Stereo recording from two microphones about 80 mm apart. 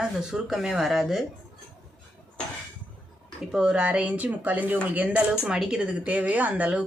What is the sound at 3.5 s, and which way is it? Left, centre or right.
Speech, centre.